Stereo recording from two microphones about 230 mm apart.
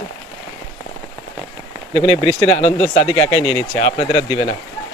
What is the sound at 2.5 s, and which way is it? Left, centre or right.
Speech, left.